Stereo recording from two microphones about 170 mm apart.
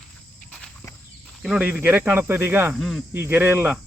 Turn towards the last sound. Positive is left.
turn(degrees=-10)  # may be behind; listen again after turning